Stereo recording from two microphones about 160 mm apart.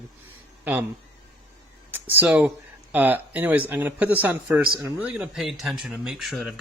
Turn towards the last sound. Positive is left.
turn(degrees=0)  # may be behind; listen again after turning